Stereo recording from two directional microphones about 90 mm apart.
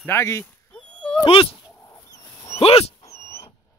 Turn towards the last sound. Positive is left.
turn(degrees=30)  # may be behind; listen again after turning